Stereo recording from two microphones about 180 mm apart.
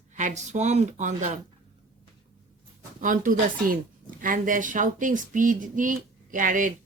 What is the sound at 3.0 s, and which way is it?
Speech, 50° right (ahead or behind).